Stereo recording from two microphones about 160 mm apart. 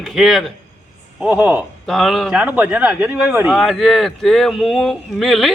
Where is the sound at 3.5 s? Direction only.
Centre (ahead or behind).